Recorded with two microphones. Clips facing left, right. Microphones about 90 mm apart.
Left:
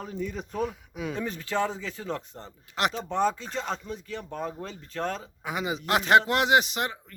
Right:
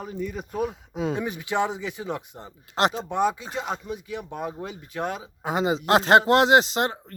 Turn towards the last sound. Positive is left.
turn(degrees=-30)  # may be behind; listen again after turning